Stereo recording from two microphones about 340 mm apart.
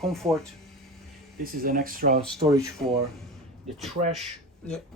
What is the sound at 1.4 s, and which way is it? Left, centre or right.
Speech, right.